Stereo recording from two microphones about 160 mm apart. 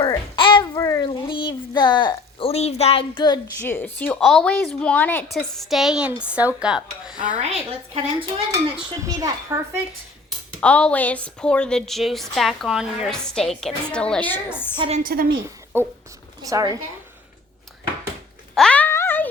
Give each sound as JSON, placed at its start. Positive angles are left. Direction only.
{"t": 0.0, "sound": "babbling", "side_deg": 30}
{"t": 1.0, "sound": "a sound", "side_deg": 30}
{"t": 3.6, "sound": "a woman's voice", "side_deg": 10}
{"t": 7.3, "sound": "a woman's voice", "side_deg": -40}
{"t": 9.0, "sound": "a woman's voice", "side_deg": -20}
{"t": 10.6, "sound": "a woman's voice", "side_deg": 5}
{"t": 14.8, "sound": "a woman's voice", "side_deg": -40}
{"t": 15.0, "sound": "a woman's voice", "side_deg": -65}
{"t": 15.7, "sound": "a woman's voice", "side_deg": -15}
{"t": 18.5, "sound": "a sound", "side_deg": 5}